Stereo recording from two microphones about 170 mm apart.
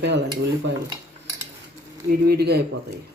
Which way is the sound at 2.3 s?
70° right (ahead or behind).